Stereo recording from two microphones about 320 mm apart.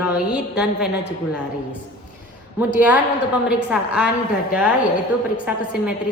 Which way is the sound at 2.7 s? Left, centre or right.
Centre.